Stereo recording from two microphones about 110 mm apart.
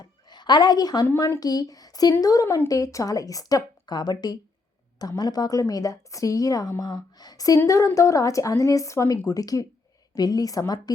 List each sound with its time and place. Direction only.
0.0 s a woman's voice: 40° left (ahead or behind)